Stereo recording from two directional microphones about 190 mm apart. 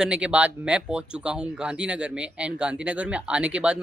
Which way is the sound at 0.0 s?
5° right (ahead or behind).